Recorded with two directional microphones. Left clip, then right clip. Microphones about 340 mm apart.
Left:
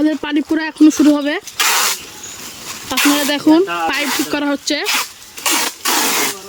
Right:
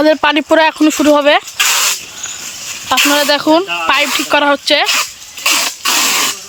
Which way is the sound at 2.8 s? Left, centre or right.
Centre.